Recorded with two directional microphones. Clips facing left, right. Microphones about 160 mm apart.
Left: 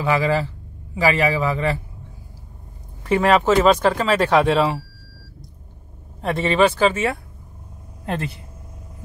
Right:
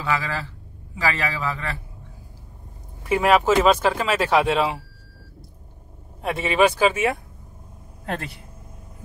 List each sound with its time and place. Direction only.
0.0 s a man's voice: 15° left (ahead or behind)
3.0 s speech: 5° right (ahead or behind)
6.2 s speech: 10° right (ahead or behind)